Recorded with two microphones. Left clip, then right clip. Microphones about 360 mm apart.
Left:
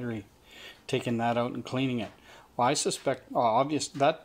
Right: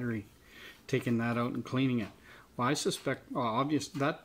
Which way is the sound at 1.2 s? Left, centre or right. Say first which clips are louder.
Left 6 dB; centre.